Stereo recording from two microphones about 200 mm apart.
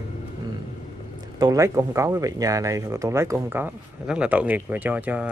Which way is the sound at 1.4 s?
15° right (ahead or behind).